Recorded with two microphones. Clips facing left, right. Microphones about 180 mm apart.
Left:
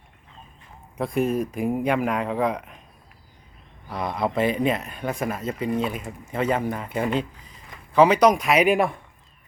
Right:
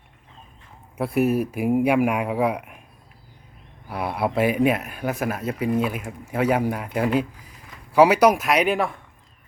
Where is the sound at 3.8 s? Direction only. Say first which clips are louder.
Right 1 dB; 10° right (ahead or behind); by 8.9 s 10° left (ahead or behind).